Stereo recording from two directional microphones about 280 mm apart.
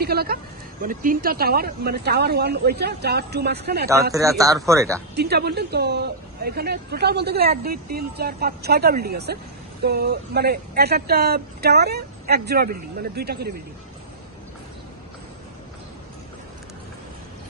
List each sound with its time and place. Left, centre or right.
0.0 s a woman's voice: right
4.1 s speech: centre
5.1 s a woman's voice: right